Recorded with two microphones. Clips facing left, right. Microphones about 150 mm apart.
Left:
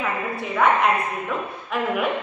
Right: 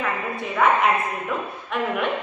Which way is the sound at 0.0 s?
Centre (ahead or behind).